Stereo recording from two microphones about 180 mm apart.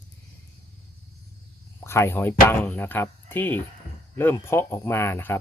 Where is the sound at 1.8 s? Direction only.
15° left (ahead or behind).